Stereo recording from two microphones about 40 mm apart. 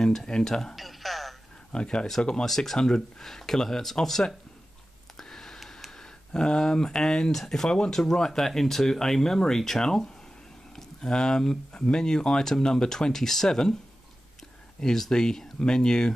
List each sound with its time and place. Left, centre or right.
0.0 s speech: centre
0.7 s music: centre
1.7 s speech: left
2.4 s speech: centre
5.2 s a sound: centre
5.9 s speech: centre
14.8 s speech: centre